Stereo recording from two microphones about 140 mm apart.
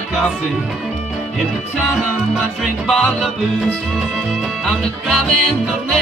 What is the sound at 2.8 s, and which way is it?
Music, centre (ahead or behind).